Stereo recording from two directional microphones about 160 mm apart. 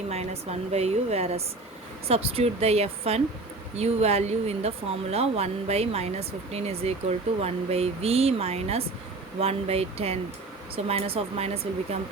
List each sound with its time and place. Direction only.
0.1 s speech: 40° right (ahead or behind)